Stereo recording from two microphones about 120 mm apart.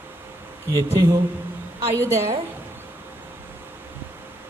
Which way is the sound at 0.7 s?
30° right (ahead or behind).